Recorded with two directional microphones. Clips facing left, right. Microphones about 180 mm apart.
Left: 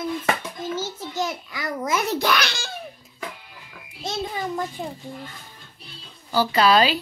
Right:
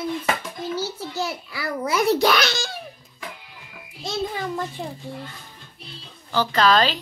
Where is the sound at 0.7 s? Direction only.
35° right (ahead or behind).